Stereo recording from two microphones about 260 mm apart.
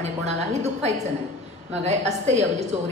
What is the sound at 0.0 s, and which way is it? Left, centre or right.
A woman's voice, right.